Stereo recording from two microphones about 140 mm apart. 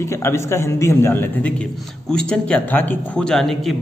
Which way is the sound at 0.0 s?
20° left (ahead or behind).